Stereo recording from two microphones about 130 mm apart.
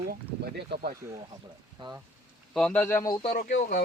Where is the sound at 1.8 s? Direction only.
40° right (ahead or behind).